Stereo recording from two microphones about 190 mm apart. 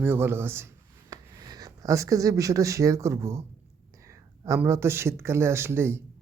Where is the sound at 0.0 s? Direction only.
10° right (ahead or behind).